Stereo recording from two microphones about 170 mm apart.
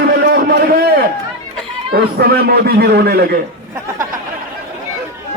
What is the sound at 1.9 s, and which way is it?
Speech, 65° right (ahead or behind).